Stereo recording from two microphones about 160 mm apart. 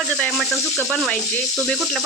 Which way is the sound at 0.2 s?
Centre (ahead or behind).